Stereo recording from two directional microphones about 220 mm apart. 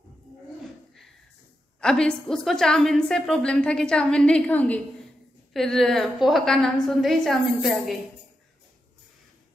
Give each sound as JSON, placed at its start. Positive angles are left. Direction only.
{"t": 1.8, "sound": "a woman's voice", "side_deg": 5}